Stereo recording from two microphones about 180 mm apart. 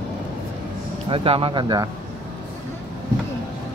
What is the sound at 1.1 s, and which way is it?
Speech, 30° right (ahead or behind).